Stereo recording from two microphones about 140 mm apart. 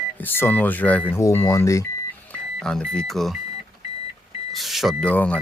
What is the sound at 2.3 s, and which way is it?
Speech, 5° left (ahead or behind).